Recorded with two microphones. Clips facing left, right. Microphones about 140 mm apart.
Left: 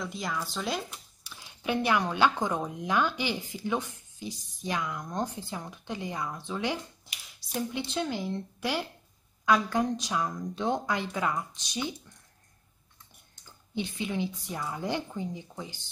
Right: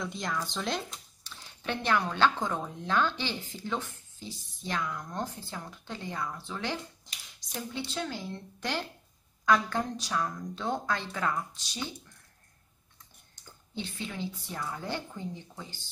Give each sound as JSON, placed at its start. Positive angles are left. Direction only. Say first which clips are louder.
{"t": 0.0, "sound": "speech", "louder": "even", "side_deg": 0}
{"t": 13.7, "sound": "speech", "louder": "left 5 dB", "side_deg": 15}